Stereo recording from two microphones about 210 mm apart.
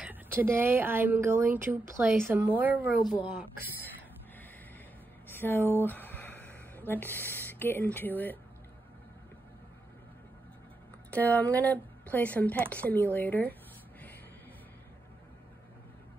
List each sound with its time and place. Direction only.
0.0 s speech: 10° right (ahead or behind)
3.0 s a woman's voice: 20° left (ahead or behind)
5.3 s speech: 10° left (ahead or behind)
11.1 s speech: 10° left (ahead or behind)